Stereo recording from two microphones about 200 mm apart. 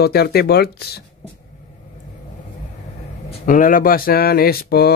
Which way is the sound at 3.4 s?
45° left (ahead or behind).